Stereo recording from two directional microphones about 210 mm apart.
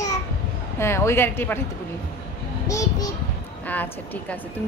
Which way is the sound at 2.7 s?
15° left (ahead or behind).